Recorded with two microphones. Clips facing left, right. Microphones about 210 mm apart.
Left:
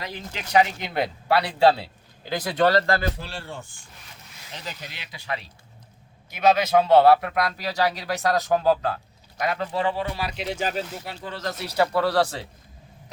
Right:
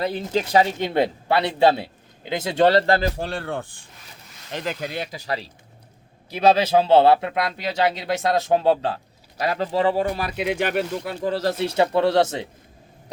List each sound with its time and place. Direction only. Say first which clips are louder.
0.0 s speech: right 12 dB; 35° right (ahead or behind)
3.2 s speech: right 8 dB; 55° right (ahead or behind)
5.1 s speech: right 4 dB; 35° right (ahead or behind); by 11.3 s 50° right (ahead or behind)
11.3 s speech: right 9 dB; 30° right (ahead or behind)